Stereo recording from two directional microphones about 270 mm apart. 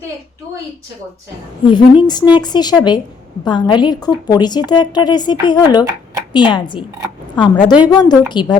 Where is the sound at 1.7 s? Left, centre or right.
Centre.